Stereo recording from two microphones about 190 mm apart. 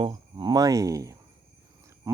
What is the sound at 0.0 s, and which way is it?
Speech, 25° right (ahead or behind).